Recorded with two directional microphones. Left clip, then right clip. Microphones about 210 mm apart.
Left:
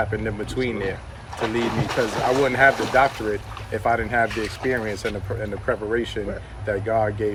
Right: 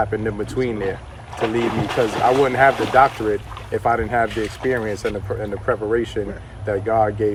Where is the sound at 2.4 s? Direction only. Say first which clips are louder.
Right 2 dB; 20° right (ahead or behind).